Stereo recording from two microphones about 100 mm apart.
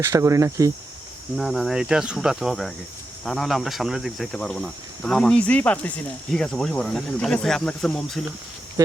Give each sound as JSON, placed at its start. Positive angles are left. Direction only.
{"t": 0.0, "sound": "speech", "side_deg": -30}
{"t": 1.4, "sound": "speech", "side_deg": 0}